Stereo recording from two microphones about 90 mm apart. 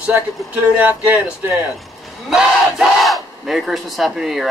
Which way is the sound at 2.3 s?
Centre (ahead or behind).